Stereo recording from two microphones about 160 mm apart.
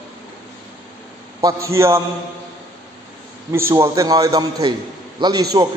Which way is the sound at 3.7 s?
20° right (ahead or behind).